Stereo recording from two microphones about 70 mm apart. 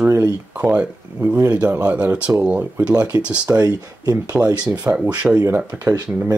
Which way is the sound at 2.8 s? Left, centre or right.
Centre.